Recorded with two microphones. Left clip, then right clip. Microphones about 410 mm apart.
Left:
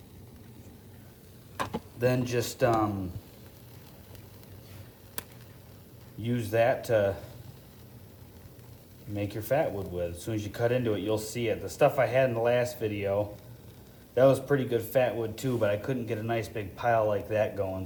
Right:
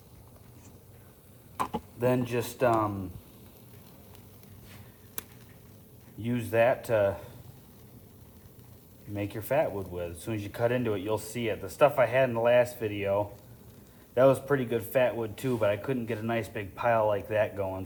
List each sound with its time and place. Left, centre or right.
2.0 s speech: centre
5.2 s chop: centre
6.2 s speech: centre
9.1 s speech: centre